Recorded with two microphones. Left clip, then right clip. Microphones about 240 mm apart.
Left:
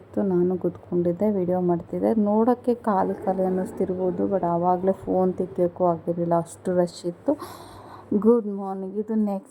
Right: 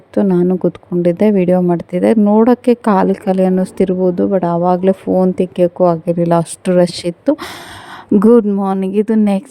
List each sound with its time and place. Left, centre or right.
0.1 s speech: right
1.3 s a woman's voice: right
1.5 s speech: right
2.0 s speech: right
8.2 s speech: right
8.8 s speech: right
9.1 s a woman's voice: right